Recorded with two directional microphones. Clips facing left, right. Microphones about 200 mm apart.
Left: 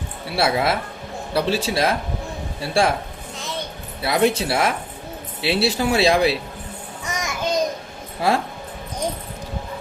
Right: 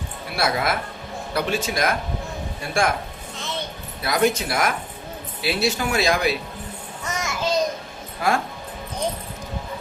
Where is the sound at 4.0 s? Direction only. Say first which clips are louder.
Left 2 dB; 30° left (ahead or behind).